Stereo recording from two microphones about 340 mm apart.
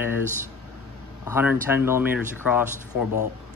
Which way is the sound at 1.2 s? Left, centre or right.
Centre.